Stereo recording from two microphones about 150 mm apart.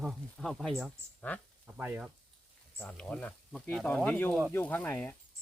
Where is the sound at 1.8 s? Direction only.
10° right (ahead or behind).